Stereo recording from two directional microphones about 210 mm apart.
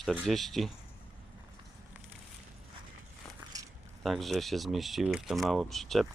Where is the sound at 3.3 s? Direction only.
15° right (ahead or behind).